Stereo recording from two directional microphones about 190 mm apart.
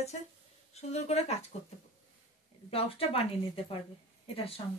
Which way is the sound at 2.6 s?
30° left (ahead or behind).